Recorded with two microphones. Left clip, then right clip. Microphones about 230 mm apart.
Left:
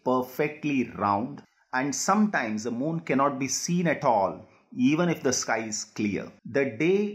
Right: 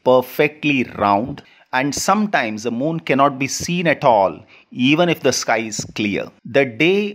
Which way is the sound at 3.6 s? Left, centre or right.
Right.